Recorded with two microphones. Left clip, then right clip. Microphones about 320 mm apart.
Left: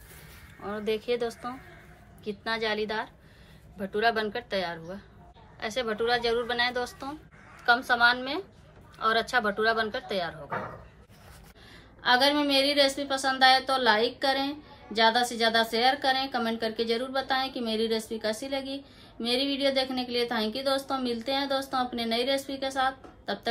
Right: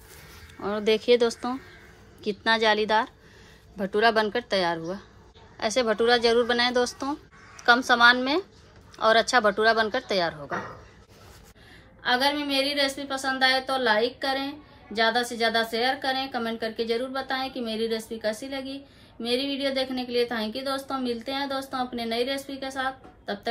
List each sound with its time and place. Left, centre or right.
0.6 s a woman's voice: right
12.0 s a woman's voice: centre